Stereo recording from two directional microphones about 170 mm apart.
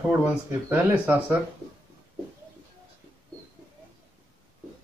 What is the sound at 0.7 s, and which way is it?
Speech, 10° right (ahead or behind).